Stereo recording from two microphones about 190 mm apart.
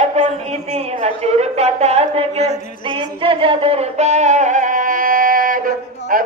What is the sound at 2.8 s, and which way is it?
Music, 25° right (ahead or behind).